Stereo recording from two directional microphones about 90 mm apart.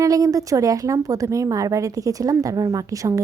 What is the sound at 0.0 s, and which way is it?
A woman's voice, 40° right (ahead or behind).